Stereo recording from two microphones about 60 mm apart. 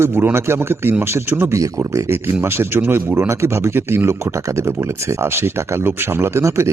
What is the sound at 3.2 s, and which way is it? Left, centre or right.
Speech, right.